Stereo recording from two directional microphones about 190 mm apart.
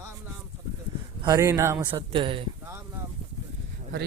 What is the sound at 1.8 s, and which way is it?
Speech, 25° right (ahead or behind).